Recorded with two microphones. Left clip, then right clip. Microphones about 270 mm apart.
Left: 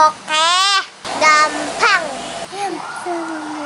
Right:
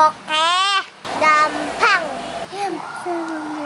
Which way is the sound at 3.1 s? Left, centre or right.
Centre.